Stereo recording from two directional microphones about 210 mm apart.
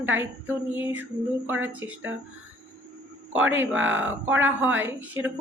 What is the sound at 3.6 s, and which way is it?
Speech, 65° right (ahead or behind).